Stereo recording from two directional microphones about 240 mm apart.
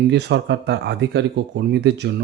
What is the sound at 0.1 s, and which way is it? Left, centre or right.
Speech, right.